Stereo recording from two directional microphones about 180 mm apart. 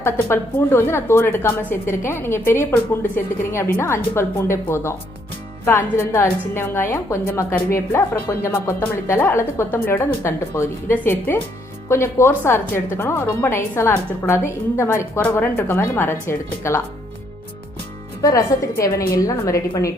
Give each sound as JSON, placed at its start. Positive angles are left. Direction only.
{"t": 0.0, "sound": "a woman's voice", "side_deg": 15}
{"t": 18.2, "sound": "a woman's voice", "side_deg": 20}